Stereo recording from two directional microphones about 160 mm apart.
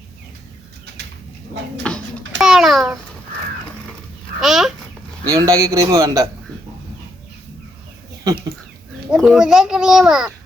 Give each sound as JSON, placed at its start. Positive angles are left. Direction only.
{"t": 1.9, "sound": "babbling", "side_deg": 5}
{"t": 2.4, "sound": "a sound", "side_deg": -5}
{"t": 4.4, "sound": "chicken", "side_deg": 0}
{"t": 5.2, "sound": "a man's voice", "side_deg": -20}
{"t": 9.0, "sound": "a child's voice", "side_deg": 0}